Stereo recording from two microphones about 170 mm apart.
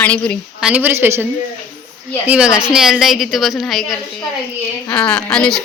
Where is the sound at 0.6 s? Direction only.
5° right (ahead or behind).